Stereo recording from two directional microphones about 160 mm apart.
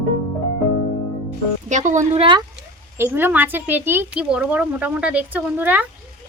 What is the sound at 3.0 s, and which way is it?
Speech, 15° right (ahead or behind).